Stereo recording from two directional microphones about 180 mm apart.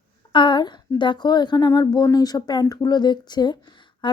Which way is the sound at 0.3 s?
25° left (ahead or behind).